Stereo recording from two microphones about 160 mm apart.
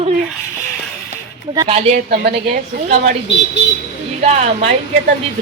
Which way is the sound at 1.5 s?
35° right (ahead or behind).